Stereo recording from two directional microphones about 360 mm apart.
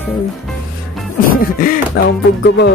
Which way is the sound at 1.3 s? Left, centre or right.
Left.